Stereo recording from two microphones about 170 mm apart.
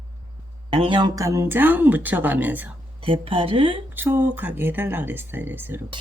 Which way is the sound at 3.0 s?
30° right (ahead or behind).